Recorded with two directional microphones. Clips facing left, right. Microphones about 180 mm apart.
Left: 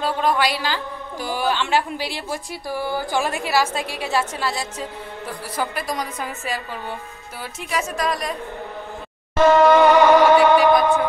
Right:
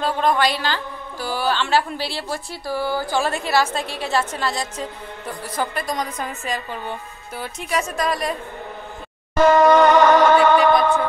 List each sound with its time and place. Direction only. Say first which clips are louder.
0.0 s a woman's voice: right 1 dB; 5° left (ahead or behind)
7.7 s a woman's voice: right 1 dB; centre (ahead or behind)
9.4 s music: even; centre (ahead or behind)